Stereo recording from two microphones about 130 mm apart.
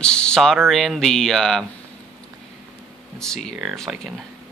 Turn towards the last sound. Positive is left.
turn(degrees=0)  # may be behind; listen again after turning